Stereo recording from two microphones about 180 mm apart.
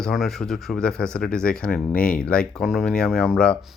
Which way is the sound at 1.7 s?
55° left (ahead or behind).